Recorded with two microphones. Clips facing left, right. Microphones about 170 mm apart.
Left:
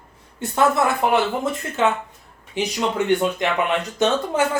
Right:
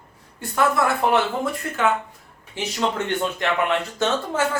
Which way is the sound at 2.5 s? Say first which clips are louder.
Left 2 dB; 15° left (ahead or behind).